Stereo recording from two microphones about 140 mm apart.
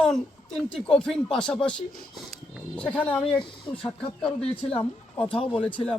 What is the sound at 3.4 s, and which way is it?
Speech, 35° left (ahead or behind).